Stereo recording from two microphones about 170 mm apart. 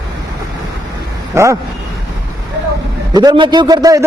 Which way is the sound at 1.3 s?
15° right (ahead or behind).